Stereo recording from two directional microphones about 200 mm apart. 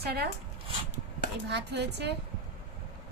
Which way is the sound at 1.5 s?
60° right (ahead or behind).